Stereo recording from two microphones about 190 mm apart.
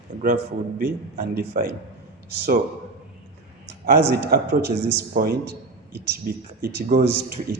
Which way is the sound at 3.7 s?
60° right (ahead or behind).